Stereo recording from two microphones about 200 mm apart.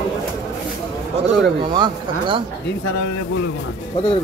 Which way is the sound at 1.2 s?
25° right (ahead or behind).